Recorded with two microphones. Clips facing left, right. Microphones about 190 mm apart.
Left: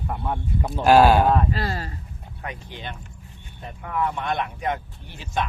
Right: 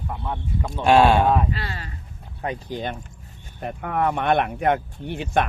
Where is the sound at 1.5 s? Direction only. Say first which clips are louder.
Left 5 dB; 40° left (ahead or behind).